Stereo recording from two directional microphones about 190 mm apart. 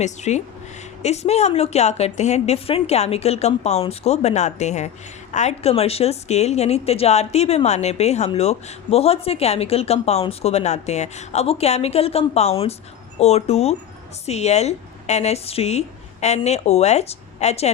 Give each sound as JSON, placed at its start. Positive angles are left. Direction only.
{"t": 0.0, "sound": "a woman's voice", "side_deg": 35}